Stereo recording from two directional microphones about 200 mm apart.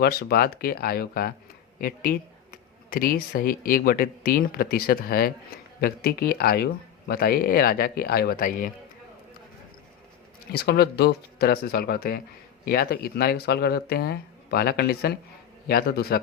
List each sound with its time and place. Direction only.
0.0 s speech: 50° left (ahead or behind)
10.5 s speech: 55° left (ahead or behind)